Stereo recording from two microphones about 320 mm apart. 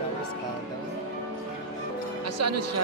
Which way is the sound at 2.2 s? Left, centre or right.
Right.